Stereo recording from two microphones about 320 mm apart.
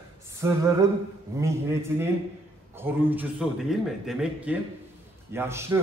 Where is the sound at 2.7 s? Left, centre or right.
Centre.